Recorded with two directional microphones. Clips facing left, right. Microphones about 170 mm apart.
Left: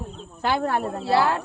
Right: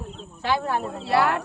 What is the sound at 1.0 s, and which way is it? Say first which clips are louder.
Speech: even; 30° left (ahead or behind).